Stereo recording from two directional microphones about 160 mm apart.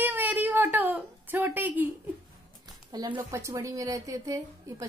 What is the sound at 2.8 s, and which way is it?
A woman's voice, 25° right (ahead or behind).